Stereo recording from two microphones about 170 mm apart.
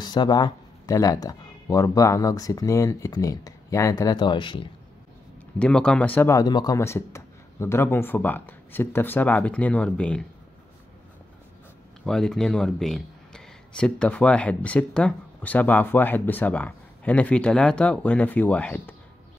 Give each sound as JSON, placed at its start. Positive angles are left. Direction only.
{"t": 0.0, "sound": "speech", "side_deg": 25}
{"t": 5.6, "sound": "speech", "side_deg": 5}
{"t": 12.0, "sound": "speech", "side_deg": 5}